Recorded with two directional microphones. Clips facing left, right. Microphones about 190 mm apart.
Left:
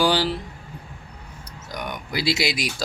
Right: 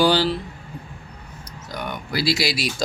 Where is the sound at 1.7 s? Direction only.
15° left (ahead or behind).